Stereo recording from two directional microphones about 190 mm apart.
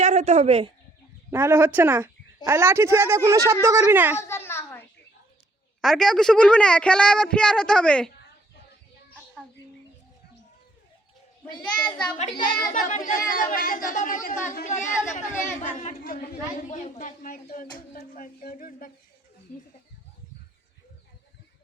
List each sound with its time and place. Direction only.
0.0 s a woman's voice: 40° right (ahead or behind)
1.3 s speech: 10° right (ahead or behind)
4.2 s a sound: 15° left (ahead or behind)
5.8 s a woman's voice: centre (ahead or behind)
12.3 s a child's voice: 25° left (ahead or behind)
12.5 s a woman's voice: 45° left (ahead or behind)